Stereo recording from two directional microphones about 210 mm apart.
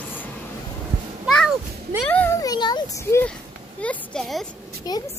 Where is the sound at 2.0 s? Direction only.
5° left (ahead or behind).